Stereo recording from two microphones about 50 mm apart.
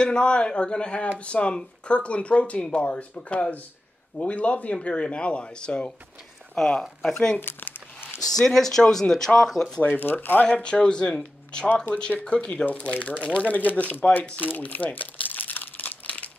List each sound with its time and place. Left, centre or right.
0.0 s speech: centre
6.6 s speech: centre
7.3 s crumpling: left
8.3 s speech: centre
9.9 s speech: left
10.4 s speech: left
11.7 s speech: left
14.4 s crumpling: left